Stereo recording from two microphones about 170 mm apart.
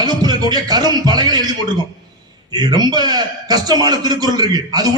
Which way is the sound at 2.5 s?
25° right (ahead or behind).